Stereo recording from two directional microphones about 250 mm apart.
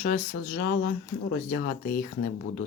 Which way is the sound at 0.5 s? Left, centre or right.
Left.